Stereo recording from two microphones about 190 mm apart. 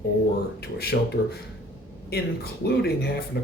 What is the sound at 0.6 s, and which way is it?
Speech, 55° left (ahead or behind).